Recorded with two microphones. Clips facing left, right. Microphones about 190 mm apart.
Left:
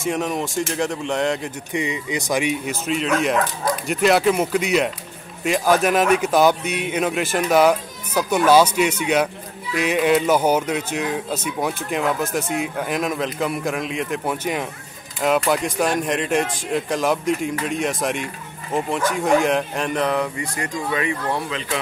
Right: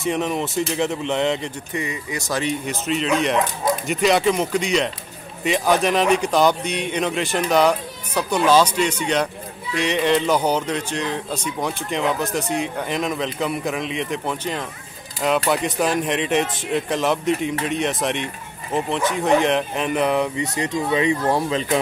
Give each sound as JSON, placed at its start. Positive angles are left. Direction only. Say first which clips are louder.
{"t": 0.0, "sound": "speech", "louder": "right 1 dB", "side_deg": 0}
{"t": 1.7, "sound": "speech", "louder": "left 4 dB", "side_deg": 15}
{"t": 2.7, "sound": "speech", "louder": "even", "side_deg": 0}
{"t": 20.1, "sound": "speech", "louder": "right 2 dB", "side_deg": -20}
{"t": 21.3, "sound": "speech", "louder": "right 5 dB", "side_deg": -35}